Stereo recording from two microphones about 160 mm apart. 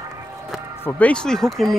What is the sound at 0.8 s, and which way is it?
Speech, 5° left (ahead or behind).